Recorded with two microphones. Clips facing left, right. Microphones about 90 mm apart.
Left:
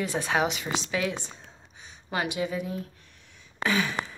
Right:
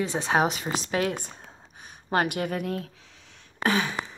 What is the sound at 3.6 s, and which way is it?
Speech, 35° right (ahead or behind).